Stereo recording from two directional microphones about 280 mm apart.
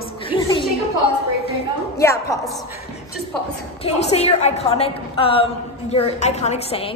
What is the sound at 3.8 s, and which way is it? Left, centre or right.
A woman's voice, left.